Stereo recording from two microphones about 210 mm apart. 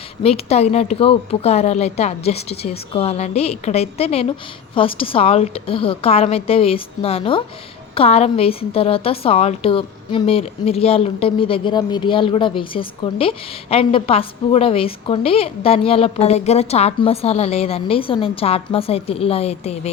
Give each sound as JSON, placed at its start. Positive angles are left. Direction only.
{"t": 0.2, "sound": "a woman's voice", "side_deg": 30}